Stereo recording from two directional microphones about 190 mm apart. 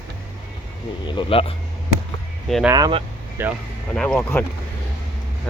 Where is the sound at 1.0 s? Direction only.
25° left (ahead or behind).